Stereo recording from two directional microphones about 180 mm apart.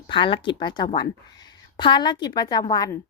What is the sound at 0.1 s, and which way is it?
A woman's voice, 25° left (ahead or behind).